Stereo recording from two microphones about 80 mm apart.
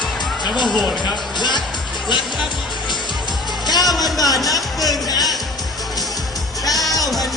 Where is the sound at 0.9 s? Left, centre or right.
Left.